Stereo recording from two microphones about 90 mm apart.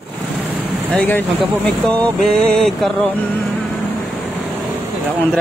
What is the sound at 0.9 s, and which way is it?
Speech, 20° left (ahead or behind).